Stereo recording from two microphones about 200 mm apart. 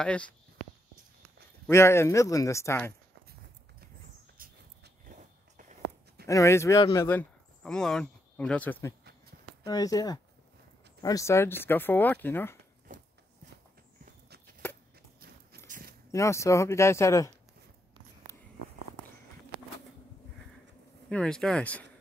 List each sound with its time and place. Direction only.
0.0 s speech: 5° left (ahead or behind)
1.7 s speech: 15° left (ahead or behind)
4.4 s a sound: 45° right (ahead or behind)
6.2 s speech: 15° left (ahead or behind)
9.7 s speech: 20° left (ahead or behind)
15.1 s horse: 50° right (ahead or behind)
16.1 s speech: 15° left (ahead or behind)
21.1 s speech: 5° left (ahead or behind)